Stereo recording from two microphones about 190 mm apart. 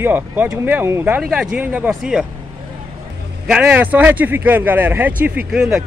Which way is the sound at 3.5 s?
5° right (ahead or behind).